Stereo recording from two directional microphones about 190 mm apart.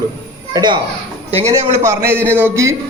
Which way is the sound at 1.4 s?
35° right (ahead or behind).